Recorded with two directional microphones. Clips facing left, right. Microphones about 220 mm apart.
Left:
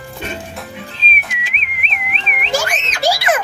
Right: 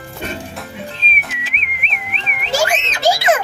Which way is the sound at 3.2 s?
25° right (ahead or behind).